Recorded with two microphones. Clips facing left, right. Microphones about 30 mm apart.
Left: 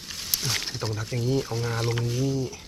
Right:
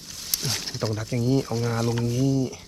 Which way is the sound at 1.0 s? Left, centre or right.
Left.